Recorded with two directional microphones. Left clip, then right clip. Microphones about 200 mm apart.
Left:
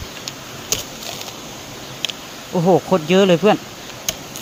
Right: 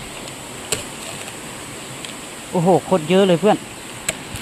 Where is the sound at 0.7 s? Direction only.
35° left (ahead or behind).